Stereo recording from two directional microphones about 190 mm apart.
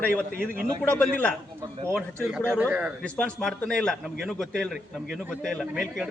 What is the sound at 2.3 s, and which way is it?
Speech, 10° right (ahead or behind).